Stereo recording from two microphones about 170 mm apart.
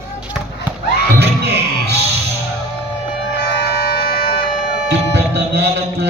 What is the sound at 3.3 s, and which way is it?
Music, 75° left (ahead or behind).